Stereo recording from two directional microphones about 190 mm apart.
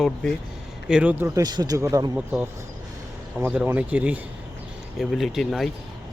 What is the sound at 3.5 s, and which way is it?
Speech, 5° right (ahead or behind).